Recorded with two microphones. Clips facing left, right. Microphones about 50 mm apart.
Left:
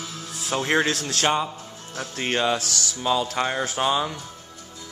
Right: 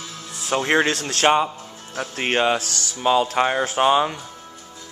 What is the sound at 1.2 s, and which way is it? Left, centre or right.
Speech, right.